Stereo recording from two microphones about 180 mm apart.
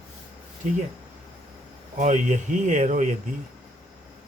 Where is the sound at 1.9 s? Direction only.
45° right (ahead or behind).